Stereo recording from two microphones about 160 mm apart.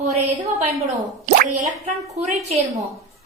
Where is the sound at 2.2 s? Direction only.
45° right (ahead or behind).